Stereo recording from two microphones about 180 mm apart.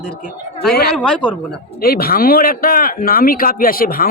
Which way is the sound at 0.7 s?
60° left (ahead or behind).